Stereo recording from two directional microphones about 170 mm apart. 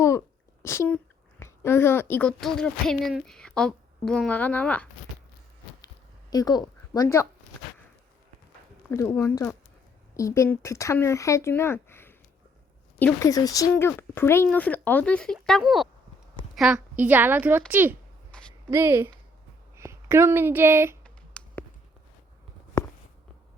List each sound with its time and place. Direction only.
0.6 s speech: 15° left (ahead or behind)
6.3 s a woman's voice: 25° left (ahead or behind)
8.9 s a woman's voice: 15° left (ahead or behind); by 17.9 s 10° right (ahead or behind)
18.3 s a sound: 5° left (ahead or behind)
18.7 s a woman's voice: 15° right (ahead or behind)
21.0 s clicking: 5° left (ahead or behind)